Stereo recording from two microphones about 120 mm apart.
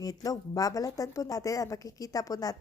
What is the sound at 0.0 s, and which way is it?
Speech, 30° left (ahead or behind).